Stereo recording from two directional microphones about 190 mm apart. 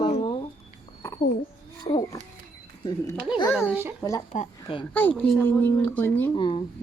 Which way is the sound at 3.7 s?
10° right (ahead or behind).